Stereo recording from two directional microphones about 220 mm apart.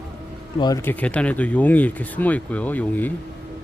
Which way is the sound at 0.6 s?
15° left (ahead or behind).